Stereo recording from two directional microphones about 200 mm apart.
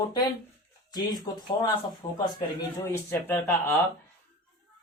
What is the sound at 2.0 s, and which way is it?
Speech, 30° left (ahead or behind).